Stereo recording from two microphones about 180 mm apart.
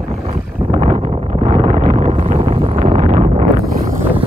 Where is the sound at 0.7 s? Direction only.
35° right (ahead or behind).